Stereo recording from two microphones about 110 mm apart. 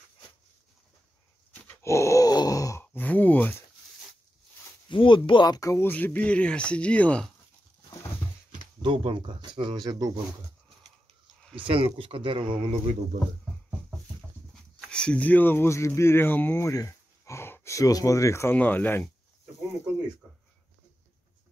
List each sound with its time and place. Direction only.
1.5 s dog: 15° left (ahead or behind)
1.9 s wail: 25° left (ahead or behind)
2.8 s a sound: 15° left (ahead or behind)
4.8 s speech: 50° left (ahead or behind); by 5.9 s 30° left (ahead or behind)
5.9 s speech: 15° left (ahead or behind)
8.8 s speech: 50° right (ahead or behind)
11.6 s speech: 55° right (ahead or behind)
14.5 s speech: 10° left (ahead or behind)